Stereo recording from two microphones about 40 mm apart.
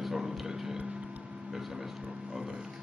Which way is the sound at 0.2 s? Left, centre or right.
Centre.